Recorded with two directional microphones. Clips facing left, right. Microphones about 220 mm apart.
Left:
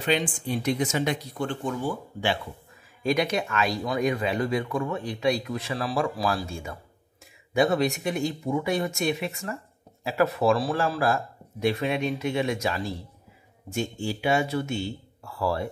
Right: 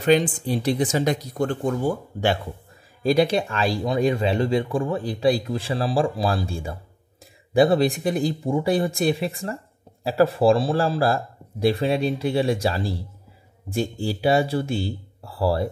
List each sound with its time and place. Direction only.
0.0 s speech: 40° right (ahead or behind)
3.0 s speech: 35° right (ahead or behind)